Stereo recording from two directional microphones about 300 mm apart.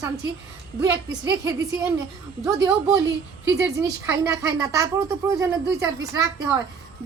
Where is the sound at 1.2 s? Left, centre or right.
Right.